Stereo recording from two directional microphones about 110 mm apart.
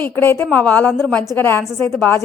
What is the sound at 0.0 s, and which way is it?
A woman's voice, 20° left (ahead or behind).